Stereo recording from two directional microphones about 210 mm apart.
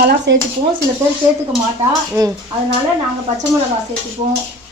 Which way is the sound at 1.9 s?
15° right (ahead or behind).